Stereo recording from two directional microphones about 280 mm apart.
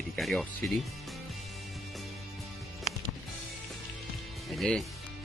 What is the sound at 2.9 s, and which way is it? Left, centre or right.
Music, left.